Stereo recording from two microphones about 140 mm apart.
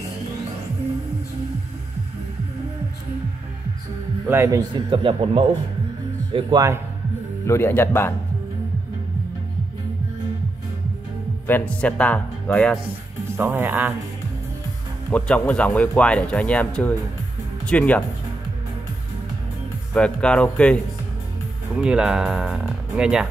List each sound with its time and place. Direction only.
4.3 s a man's voice: 20° right (ahead or behind)
7.4 s speech: 15° left (ahead or behind)
11.4 s speech: 10° left (ahead or behind)
13.4 s speech: 15° right (ahead or behind)
15.0 s speech: 10° left (ahead or behind)
19.9 s speech: 5° left (ahead or behind)
21.7 s speech: 5° right (ahead or behind)